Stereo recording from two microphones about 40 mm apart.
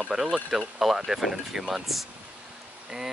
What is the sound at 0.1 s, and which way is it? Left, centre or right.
Speech, right.